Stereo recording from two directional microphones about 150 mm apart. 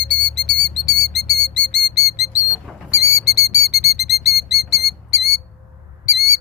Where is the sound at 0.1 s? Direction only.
5° left (ahead or behind).